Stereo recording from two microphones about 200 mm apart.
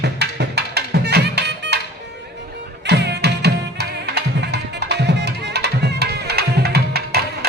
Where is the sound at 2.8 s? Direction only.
55° right (ahead or behind).